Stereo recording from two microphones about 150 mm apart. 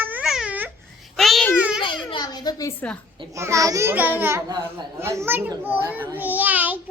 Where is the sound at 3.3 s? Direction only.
20° right (ahead or behind).